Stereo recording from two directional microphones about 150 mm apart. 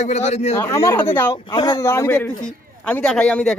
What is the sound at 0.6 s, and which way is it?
Speech, 20° left (ahead or behind).